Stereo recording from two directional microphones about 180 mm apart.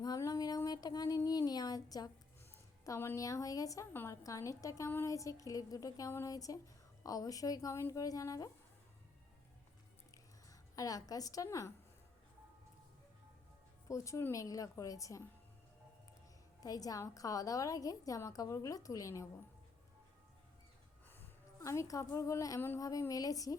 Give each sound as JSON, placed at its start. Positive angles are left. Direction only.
{"t": 0.0, "sound": "a sound", "side_deg": 20}
{"t": 2.8, "sound": "a woman's voice", "side_deg": 15}
{"t": 10.5, "sound": "a woman's voice", "side_deg": 20}
{"t": 13.8, "sound": "a woman's voice", "side_deg": 15}
{"t": 16.6, "sound": "a woman's voice", "side_deg": 20}
{"t": 21.1, "sound": "a woman's voice", "side_deg": 15}